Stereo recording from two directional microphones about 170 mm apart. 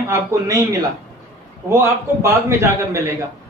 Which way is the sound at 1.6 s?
15° right (ahead or behind).